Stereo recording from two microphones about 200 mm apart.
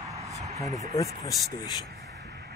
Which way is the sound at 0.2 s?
35° right (ahead or behind).